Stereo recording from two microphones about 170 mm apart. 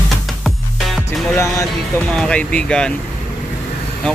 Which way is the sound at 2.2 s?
5° left (ahead or behind).